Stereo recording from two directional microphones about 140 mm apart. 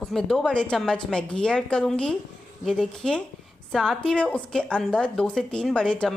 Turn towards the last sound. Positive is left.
turn(degrees=5)  # may be behind; listen again after turning